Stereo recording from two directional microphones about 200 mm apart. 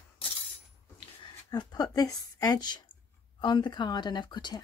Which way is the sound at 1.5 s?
20° left (ahead or behind).